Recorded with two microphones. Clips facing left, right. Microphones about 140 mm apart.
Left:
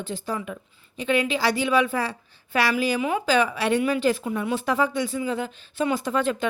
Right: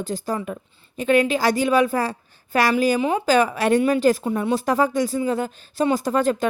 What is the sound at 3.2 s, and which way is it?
Speech, 45° right (ahead or behind).